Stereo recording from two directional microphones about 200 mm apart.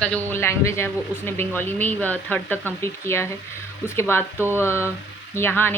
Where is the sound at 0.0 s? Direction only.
10° left (ahead or behind).